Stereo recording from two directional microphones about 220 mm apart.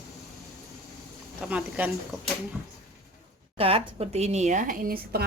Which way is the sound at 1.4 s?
5° right (ahead or behind).